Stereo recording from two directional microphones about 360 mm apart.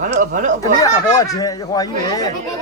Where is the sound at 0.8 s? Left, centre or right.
Centre.